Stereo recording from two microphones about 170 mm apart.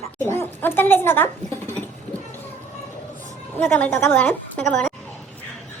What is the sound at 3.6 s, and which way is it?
Speech, 10° left (ahead or behind).